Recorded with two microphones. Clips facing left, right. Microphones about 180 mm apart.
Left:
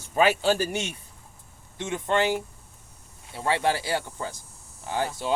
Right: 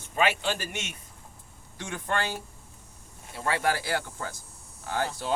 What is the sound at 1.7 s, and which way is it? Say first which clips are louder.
Speech: left 6 dB; 20° left (ahead or behind).